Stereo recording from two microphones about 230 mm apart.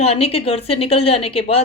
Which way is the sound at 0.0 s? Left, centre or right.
Left.